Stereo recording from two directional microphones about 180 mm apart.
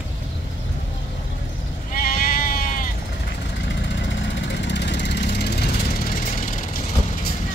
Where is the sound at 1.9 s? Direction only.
50° left (ahead or behind).